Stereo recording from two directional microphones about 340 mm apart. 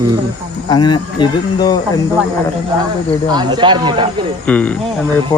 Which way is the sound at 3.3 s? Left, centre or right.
Centre.